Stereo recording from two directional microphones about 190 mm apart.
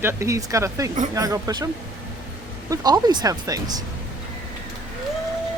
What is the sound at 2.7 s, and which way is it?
Speech, 20° right (ahead or behind).